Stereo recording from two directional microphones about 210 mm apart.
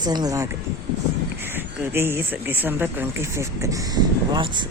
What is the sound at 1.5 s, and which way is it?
Speech, 10° right (ahead or behind).